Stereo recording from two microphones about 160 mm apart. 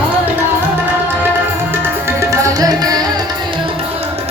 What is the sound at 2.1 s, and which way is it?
Music, 20° right (ahead or behind).